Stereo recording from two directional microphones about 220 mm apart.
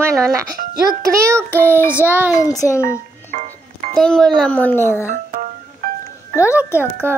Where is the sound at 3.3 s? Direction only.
35° right (ahead or behind).